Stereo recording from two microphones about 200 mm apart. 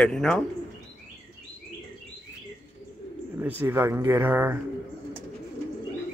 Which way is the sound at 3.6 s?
10° right (ahead or behind).